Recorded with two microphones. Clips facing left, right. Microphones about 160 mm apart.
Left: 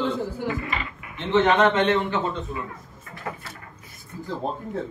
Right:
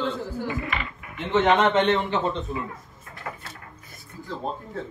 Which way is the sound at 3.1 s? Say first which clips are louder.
Left 2 dB; 20° left (ahead or behind).